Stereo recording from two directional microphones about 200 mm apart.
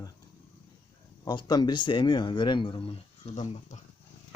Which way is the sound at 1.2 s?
20° left (ahead or behind).